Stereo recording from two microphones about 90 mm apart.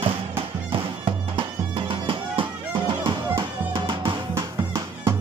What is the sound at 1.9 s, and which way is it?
Music, 70° right (ahead or behind).